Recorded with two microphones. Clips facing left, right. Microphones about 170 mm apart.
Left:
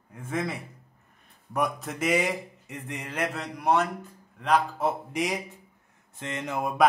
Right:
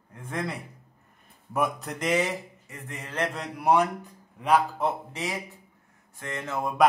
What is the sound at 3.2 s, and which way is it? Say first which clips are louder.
A man's voice: right 2 dB; centre (ahead or behind).